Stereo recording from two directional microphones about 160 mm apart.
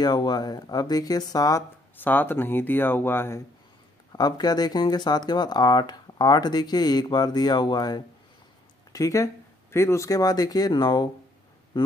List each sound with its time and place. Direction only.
0.0 s speech: 25° left (ahead or behind)
4.1 s speech: 25° left (ahead or behind)
11.7 s a sound: 30° left (ahead or behind)